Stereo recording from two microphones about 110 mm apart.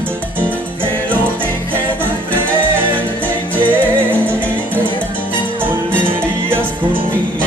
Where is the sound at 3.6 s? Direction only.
15° left (ahead or behind).